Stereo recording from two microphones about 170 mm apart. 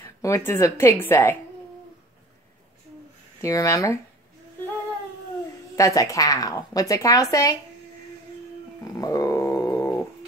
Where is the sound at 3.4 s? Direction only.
20° left (ahead or behind).